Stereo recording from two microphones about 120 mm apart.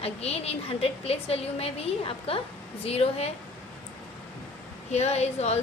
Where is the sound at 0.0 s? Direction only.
60° left (ahead or behind).